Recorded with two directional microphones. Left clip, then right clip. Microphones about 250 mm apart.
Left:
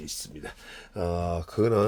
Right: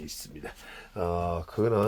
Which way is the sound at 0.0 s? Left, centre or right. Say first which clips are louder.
Left 2 dB; centre.